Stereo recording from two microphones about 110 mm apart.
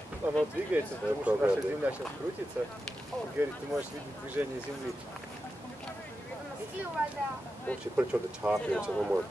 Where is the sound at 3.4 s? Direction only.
15° right (ahead or behind).